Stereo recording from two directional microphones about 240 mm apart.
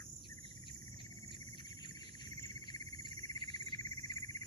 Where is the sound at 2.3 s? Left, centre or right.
Centre.